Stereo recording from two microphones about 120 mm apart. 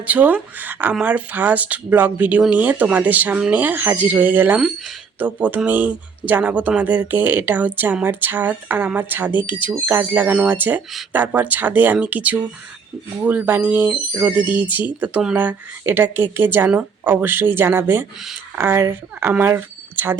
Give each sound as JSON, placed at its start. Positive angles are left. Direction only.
{"t": 0.0, "sound": "speech", "side_deg": -15}